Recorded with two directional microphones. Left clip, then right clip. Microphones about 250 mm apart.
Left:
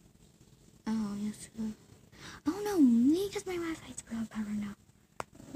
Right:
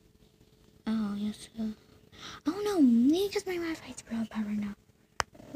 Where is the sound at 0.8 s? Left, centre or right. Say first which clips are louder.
Right 3 dB; centre.